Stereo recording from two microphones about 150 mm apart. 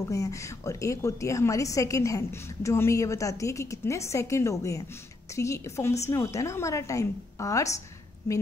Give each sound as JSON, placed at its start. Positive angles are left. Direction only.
{"t": 0.1, "sound": "a woman's voice", "side_deg": 20}